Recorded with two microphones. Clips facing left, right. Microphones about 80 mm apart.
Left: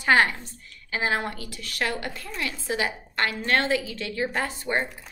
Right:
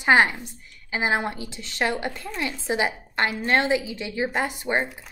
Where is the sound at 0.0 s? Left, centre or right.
Centre.